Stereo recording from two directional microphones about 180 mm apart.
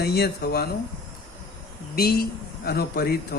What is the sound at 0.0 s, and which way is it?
Speech, 60° left (ahead or behind).